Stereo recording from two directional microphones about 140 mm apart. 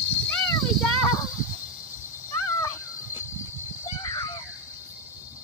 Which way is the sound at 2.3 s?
20° left (ahead or behind).